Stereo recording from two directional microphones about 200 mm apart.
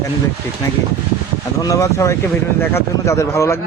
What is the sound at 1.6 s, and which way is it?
A man's voice, 15° left (ahead or behind).